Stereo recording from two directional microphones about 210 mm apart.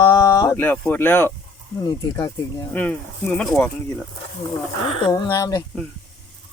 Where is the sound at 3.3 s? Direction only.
5° left (ahead or behind).